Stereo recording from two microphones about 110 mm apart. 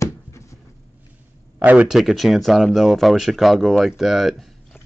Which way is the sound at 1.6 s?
15° right (ahead or behind).